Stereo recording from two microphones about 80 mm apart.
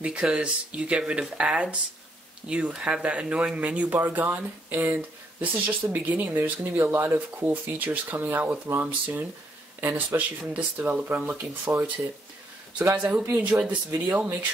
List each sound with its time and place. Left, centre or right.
0.0 s speech: centre
12.9 s speech: centre